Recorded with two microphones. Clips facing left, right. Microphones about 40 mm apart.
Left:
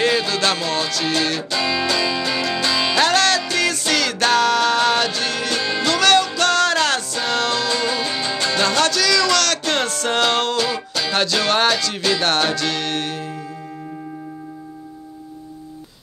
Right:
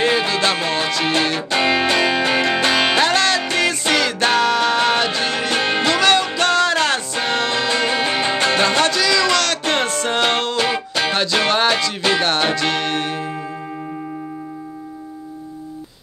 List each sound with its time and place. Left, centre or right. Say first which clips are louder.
0.0 s music: right 1 dB; centre
1.5 s music: right 7 dB; right
3.0 s music: even; centre
3.4 s music: right 2 dB; right
5.5 s music: right 5 dB; right
5.9 s music: left 2 dB; centre; by 8.6 s right
8.6 s music: right 1 dB; centre
10.6 s music: right 3 dB; right
12.2 s music: right 1 dB; centre